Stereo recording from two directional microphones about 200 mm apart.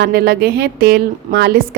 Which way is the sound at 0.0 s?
55° right (ahead or behind).